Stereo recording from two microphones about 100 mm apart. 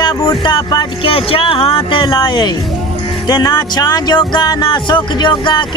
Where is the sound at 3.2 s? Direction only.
40° left (ahead or behind).